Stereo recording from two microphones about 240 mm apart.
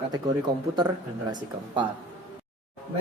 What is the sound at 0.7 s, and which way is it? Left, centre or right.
A man's voice, centre.